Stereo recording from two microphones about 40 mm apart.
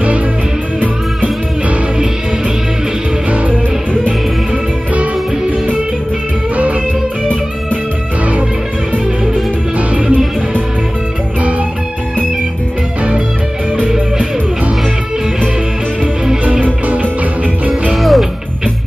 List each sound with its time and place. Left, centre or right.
6.5 s music: right
8.9 s music: right
13.8 s music: right
16.6 s music: right
17.9 s music: centre